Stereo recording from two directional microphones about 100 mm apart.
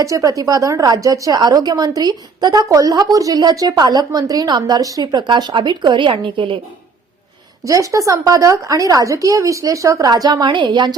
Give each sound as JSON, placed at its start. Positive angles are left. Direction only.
{"t": 0.0, "sound": "a woman's voice", "side_deg": -35}
{"t": 7.6, "sound": "a woman's voice", "side_deg": -35}